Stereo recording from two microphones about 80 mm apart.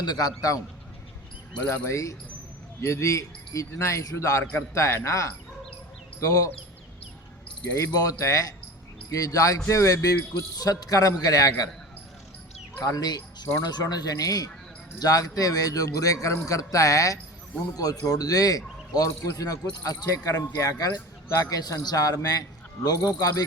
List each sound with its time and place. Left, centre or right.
0.0 s speech: left
1.7 s speech: left
7.9 s speech: left
12.8 s speech: left